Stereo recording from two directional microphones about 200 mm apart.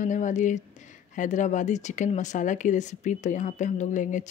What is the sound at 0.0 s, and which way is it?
Speech, 40° left (ahead or behind).